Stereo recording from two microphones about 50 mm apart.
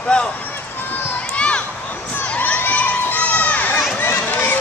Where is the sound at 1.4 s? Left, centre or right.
Left.